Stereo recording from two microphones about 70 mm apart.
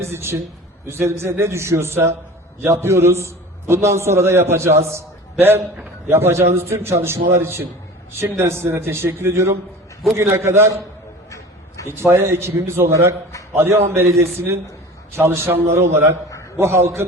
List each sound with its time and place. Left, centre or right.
0.0 s a man's voice: right
11.9 s a man's voice: right